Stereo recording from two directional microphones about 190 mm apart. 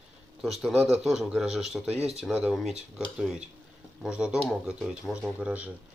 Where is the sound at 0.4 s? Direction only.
Centre (ahead or behind).